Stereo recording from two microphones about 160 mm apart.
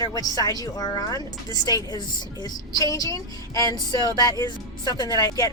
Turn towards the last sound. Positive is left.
turn(degrees=20)  # may be behind; listen again after turning